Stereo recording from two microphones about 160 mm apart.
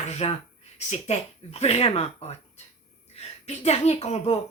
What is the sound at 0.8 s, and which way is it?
Speech, 45° left (ahead or behind).